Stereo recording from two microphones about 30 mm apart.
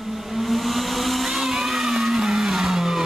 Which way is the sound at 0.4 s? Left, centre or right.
Centre.